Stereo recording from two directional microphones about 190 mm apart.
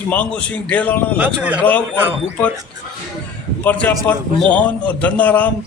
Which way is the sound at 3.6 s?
10° left (ahead or behind).